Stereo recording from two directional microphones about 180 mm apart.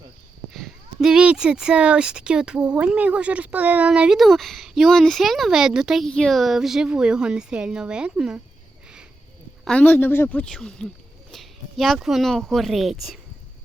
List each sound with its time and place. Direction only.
0.5 s speech: centre (ahead or behind)
9.6 s a woman's voice: 10° left (ahead or behind)